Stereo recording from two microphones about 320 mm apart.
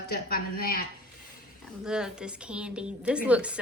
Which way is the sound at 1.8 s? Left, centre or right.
Centre.